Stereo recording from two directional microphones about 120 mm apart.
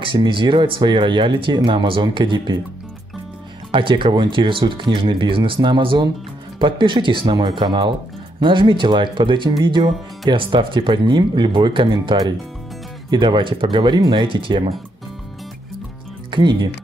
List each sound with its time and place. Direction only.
0.0 s speech: 45° right (ahead or behind)
3.7 s speech: 45° right (ahead or behind)
16.3 s speech: 40° right (ahead or behind)